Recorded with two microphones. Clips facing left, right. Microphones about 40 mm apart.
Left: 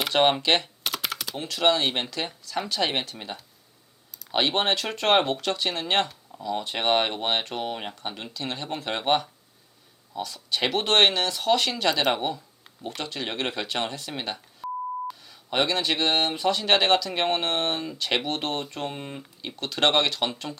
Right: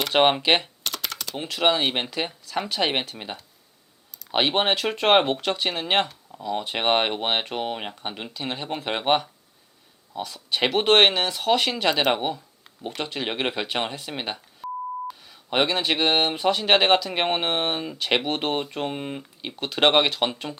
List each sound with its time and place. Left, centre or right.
0.1 s speech: centre
0.9 s typing: centre
1.4 s speech: centre
14.6 s beep: centre
15.4 s speech: centre